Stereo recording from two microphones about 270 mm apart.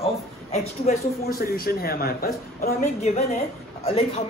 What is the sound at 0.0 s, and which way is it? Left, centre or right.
A man's voice, left.